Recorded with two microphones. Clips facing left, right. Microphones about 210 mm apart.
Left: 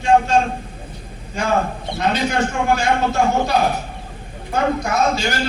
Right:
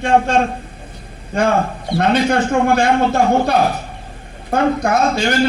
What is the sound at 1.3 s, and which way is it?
Speech, 55° right (ahead or behind).